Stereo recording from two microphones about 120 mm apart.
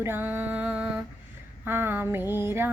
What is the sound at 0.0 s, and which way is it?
Music, 15° right (ahead or behind).